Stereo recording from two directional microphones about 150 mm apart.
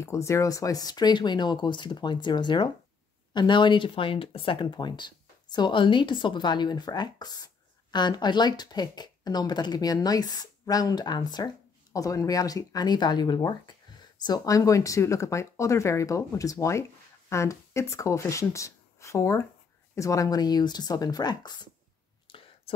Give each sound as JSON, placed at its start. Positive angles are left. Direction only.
{"t": 0.0, "sound": "speech", "side_deg": 20}
{"t": 22.3, "sound": "whispering", "side_deg": 35}